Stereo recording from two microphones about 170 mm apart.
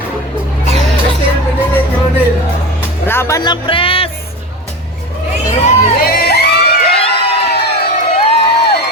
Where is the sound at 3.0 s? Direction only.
15° left (ahead or behind); by 4.1 s 30° left (ahead or behind).